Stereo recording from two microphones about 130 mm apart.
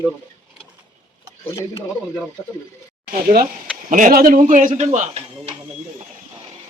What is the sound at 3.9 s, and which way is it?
Speech, 80° right.